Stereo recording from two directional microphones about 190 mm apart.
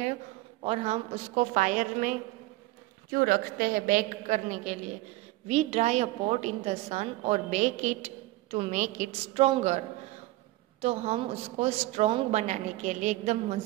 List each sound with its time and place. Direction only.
0.7 s a woman's voice: 35° right (ahead or behind)
10.8 s a woman's voice: 35° right (ahead or behind)